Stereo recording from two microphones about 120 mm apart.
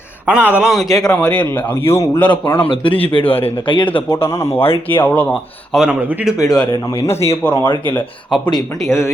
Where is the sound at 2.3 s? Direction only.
40° left (ahead or behind).